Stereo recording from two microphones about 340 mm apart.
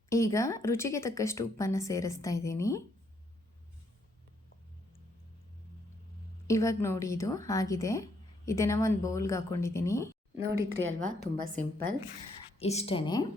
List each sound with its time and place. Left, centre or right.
0.1 s a woman's voice: centre
6.5 s a woman's voice: centre
10.3 s speech: right
12.5 s a woman's voice: centre